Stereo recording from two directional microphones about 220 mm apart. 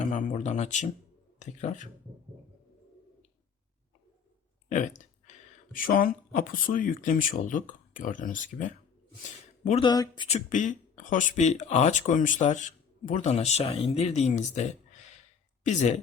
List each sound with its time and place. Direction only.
0.1 s speech: 35° left (ahead or behind)
5.2 s speech: 35° left (ahead or behind)
9.6 s speech: 25° left (ahead or behind)
10.5 s speech: 35° left (ahead or behind)